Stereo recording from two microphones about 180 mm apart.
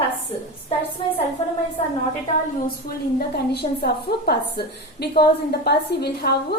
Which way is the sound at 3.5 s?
65° left (ahead or behind).